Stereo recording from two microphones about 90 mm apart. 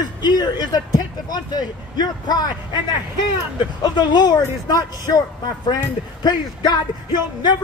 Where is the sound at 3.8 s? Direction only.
50° left (ahead or behind).